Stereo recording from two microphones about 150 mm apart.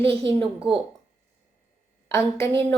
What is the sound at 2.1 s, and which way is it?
Speech, 20° left (ahead or behind).